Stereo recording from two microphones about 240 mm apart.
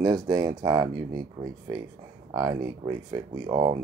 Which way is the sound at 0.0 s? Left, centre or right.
Centre.